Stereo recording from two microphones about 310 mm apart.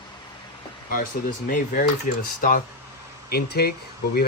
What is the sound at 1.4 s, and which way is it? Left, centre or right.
Speech, left.